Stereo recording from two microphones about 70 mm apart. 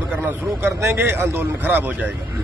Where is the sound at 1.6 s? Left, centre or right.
Right.